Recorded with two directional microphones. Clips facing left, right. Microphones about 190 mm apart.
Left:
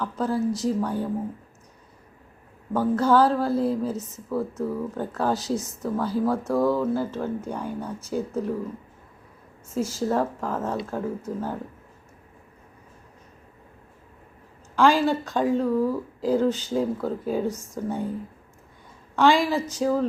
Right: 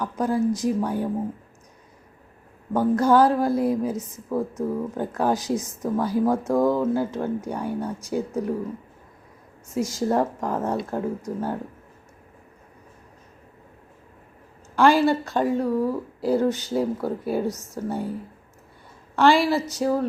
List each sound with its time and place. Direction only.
0.0 s speech: 15° right (ahead or behind)
2.7 s speech: 15° right (ahead or behind)
9.7 s speech: 15° right (ahead or behind)
14.8 s speech: 10° right (ahead or behind)
17.5 s speech: 10° left (ahead or behind)
17.8 s speech: 5° right (ahead or behind)
19.1 s speech: 10° right (ahead or behind)